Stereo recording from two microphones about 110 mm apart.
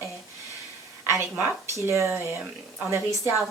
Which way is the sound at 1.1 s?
20° right (ahead or behind).